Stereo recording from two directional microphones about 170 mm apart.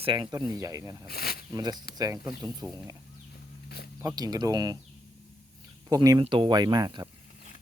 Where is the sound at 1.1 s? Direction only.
65° left (ahead or behind).